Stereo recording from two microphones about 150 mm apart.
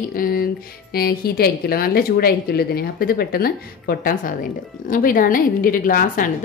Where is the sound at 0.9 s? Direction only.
90° left.